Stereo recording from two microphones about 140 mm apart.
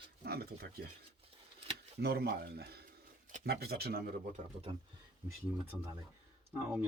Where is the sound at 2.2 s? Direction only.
90° right.